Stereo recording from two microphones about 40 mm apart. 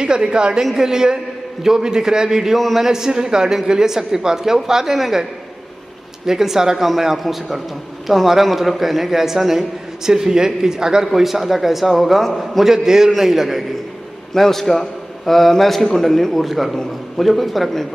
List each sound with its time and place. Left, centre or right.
0.0 s a woman's voice: right
2.5 s a man's voice: centre
2.9 s a man's voice: centre
6.2 s a man's voice: centre
12.7 s a man's voice: centre
14.3 s a man's voice: centre